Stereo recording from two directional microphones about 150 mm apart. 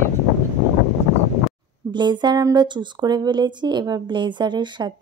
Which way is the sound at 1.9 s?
30° right (ahead or behind).